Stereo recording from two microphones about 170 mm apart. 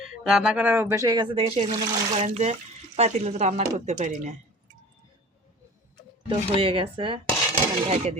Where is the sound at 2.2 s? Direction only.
40° right (ahead or behind).